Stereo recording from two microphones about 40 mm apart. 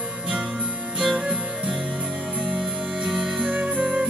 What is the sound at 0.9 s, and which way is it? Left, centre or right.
Music, right.